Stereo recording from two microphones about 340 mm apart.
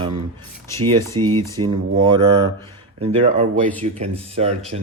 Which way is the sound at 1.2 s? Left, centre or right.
Right.